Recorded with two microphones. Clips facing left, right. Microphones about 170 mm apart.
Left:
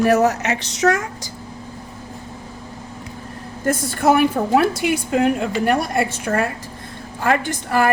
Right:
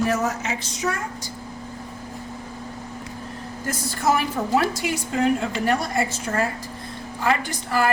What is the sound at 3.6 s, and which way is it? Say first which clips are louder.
A woman's voice: left 6 dB; 55° left (ahead or behind).